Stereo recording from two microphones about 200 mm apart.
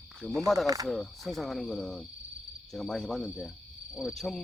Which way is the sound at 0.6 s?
20° right (ahead or behind).